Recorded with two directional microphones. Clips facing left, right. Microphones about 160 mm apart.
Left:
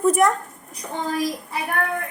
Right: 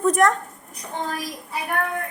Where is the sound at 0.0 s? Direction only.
5° left (ahead or behind).